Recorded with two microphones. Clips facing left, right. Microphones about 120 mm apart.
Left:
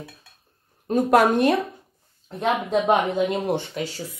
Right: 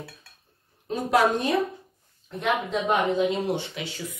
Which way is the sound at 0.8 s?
50° left (ahead or behind).